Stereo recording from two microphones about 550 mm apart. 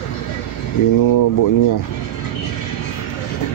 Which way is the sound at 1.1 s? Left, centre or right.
Left.